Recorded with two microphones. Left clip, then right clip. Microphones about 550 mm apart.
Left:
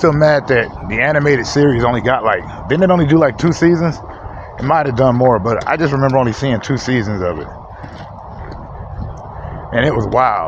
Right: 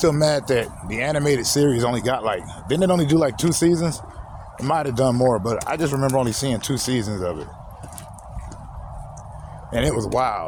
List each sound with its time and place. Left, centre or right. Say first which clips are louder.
0.0 s speech: left 7 dB; right
9.7 s speech: left 8 dB; right